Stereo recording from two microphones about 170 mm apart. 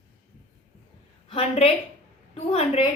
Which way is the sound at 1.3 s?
35° left (ahead or behind).